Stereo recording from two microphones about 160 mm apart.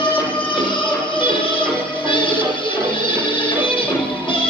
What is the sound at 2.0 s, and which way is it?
Music, 30° left (ahead or behind).